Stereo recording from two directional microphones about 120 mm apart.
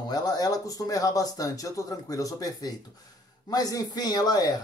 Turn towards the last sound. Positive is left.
turn(degrees=35)  # may be behind; listen again after turning